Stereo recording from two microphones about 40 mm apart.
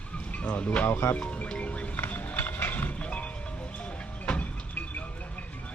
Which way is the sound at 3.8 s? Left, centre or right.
Left.